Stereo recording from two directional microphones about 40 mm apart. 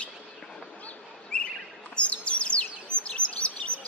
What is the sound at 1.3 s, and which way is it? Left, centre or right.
Bird, left.